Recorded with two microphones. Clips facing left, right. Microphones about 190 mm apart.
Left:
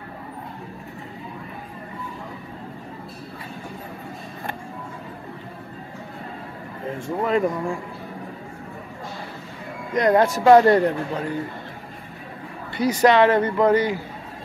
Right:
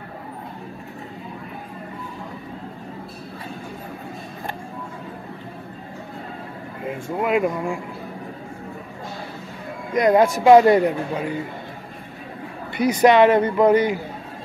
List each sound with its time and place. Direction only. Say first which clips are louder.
6.9 s speech: right 1 dB; 10° right (ahead or behind)
9.9 s speech: right 2 dB; 10° right (ahead or behind)
12.7 s speech: right 2 dB; 15° right (ahead or behind)